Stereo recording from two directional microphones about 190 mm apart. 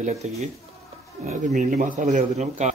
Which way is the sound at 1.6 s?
40° right (ahead or behind).